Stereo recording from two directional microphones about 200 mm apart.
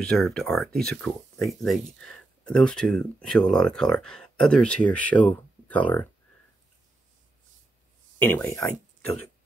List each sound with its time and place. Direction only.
0.0 s speech: 5° left (ahead or behind)
8.3 s speech: 10° left (ahead or behind)